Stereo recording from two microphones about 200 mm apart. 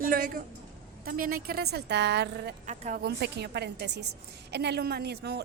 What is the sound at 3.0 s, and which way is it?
Speech, 55° right (ahead or behind).